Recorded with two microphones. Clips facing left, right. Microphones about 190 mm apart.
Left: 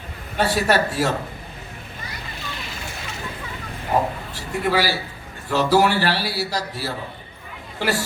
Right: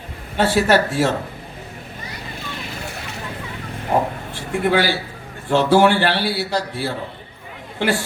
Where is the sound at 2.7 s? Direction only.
60° right (ahead or behind).